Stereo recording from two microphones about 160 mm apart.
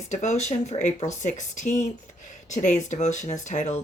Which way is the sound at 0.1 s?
45° left (ahead or behind).